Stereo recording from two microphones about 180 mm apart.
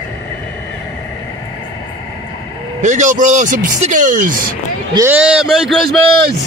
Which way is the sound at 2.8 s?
40° right (ahead or behind).